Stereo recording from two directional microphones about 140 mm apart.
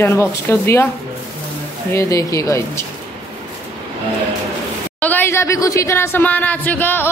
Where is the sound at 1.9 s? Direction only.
20° left (ahead or behind).